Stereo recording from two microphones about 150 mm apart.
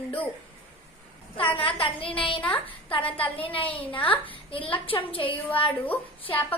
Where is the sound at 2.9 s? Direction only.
35° left (ahead or behind).